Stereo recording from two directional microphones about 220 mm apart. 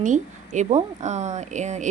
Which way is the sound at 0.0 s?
35° right (ahead or behind).